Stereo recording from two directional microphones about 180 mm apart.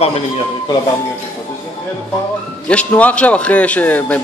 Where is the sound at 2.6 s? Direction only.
5° left (ahead or behind).